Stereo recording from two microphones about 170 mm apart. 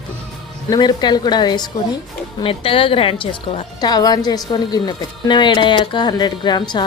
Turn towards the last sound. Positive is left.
turn(degrees=25)  # may be behind; listen again after turning